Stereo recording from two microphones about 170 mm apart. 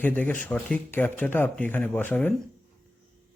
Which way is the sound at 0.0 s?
10° left (ahead or behind).